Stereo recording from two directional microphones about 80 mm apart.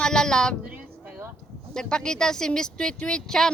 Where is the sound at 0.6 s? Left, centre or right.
Centre.